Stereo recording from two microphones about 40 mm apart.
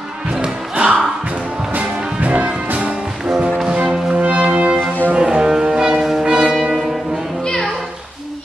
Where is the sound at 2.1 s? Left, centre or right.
Right.